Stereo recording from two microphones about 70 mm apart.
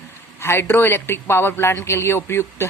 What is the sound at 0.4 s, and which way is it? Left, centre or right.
Speech, left.